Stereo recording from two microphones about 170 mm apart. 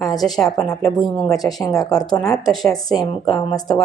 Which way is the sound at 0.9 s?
25° left (ahead or behind).